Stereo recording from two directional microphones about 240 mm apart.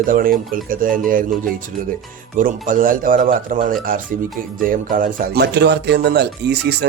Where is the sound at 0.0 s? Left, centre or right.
Right.